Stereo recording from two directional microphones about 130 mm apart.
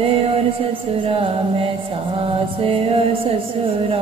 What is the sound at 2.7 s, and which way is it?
Music, 45° right (ahead or behind).